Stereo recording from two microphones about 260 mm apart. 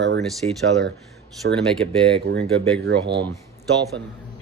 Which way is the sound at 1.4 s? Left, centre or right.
Right.